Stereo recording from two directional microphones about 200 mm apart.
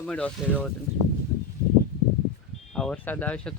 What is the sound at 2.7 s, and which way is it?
Speech, 5° left (ahead or behind).